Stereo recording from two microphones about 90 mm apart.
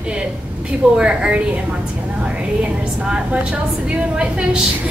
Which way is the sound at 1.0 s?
10° right (ahead or behind).